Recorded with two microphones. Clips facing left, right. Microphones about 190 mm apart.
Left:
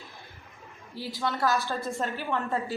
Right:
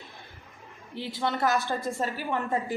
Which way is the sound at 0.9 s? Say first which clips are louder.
Right 2 dB; 20° right (ahead or behind).